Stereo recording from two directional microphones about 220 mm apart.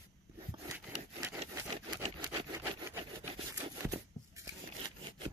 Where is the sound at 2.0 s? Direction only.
20° right (ahead or behind).